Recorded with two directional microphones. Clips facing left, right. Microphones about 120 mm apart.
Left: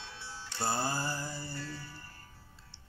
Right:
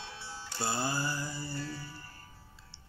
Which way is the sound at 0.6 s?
45° left (ahead or behind).